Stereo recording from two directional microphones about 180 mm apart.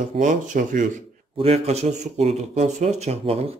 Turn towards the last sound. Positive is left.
turn(degrees=-35)  # may be behind; listen again after turning